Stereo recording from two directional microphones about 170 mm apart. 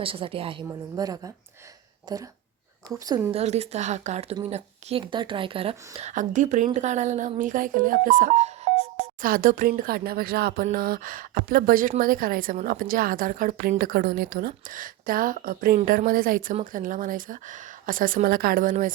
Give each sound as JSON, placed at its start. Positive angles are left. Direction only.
{"t": 0.0, "sound": "speech", "side_deg": -30}
{"t": 3.3, "sound": "speech", "side_deg": -40}
{"t": 6.0, "sound": "a woman's voice", "side_deg": -45}